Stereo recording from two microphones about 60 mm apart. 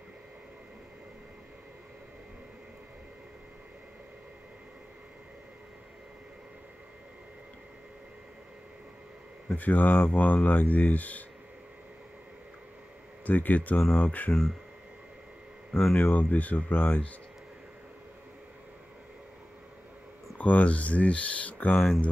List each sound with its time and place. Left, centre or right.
9.6 s speech: left
13.2 s speech: left
15.7 s speech: centre
16.0 s speech: left
20.3 s speech: left
21.7 s speech: centre